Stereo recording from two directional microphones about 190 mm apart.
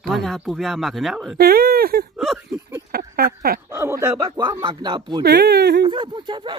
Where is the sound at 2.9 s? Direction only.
50° right (ahead or behind).